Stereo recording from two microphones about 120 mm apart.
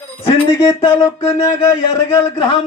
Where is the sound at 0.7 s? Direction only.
35° left (ahead or behind).